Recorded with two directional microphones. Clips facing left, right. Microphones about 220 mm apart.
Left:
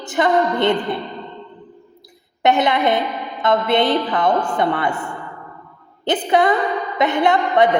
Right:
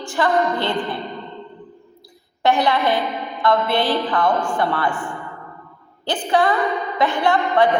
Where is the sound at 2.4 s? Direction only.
20° left (ahead or behind).